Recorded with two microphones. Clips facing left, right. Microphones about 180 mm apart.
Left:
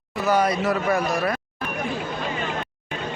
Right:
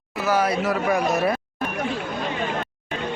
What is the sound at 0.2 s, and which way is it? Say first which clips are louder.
Speech: left 1 dB; 5° right (ahead or behind).